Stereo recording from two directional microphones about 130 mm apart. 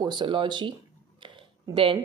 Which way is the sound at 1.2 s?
40° right (ahead or behind).